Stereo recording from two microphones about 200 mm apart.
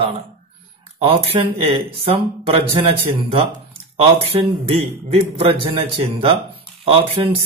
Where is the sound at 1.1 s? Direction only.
30° right (ahead or behind).